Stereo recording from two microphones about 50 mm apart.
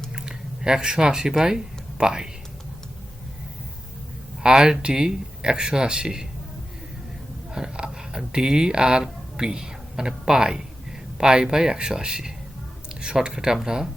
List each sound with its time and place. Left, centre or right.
0.1 s speech: centre
4.4 s speech: centre
7.5 s speech: centre